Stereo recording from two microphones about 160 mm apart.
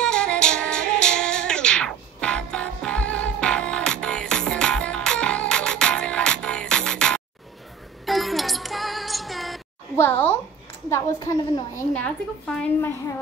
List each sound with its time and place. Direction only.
0.0 s music: 5° left (ahead or behind)
9.9 s a sound: 15° left (ahead or behind)
10.9 s a woman's voice: 20° left (ahead or behind)